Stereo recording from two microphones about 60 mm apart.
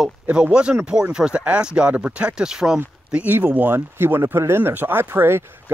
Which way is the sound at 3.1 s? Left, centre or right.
Right.